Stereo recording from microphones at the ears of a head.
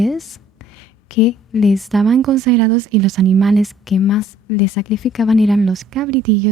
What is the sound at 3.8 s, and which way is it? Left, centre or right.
A woman's voice, left.